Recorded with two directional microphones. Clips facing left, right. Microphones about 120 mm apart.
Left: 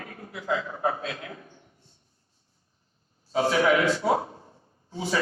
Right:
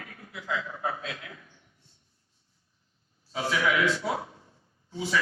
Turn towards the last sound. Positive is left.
turn(degrees=40)  # may be behind; listen again after turning